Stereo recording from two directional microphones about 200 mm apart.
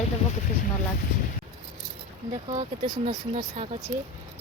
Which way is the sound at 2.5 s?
25° right (ahead or behind).